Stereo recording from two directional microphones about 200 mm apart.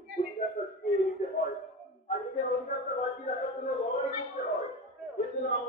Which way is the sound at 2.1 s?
40° left (ahead or behind).